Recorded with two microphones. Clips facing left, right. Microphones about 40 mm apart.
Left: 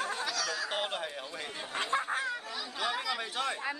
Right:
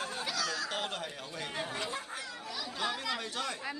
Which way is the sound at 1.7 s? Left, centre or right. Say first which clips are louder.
Left 6 dB; left.